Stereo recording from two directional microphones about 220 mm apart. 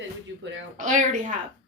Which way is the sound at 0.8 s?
35° right (ahead or behind).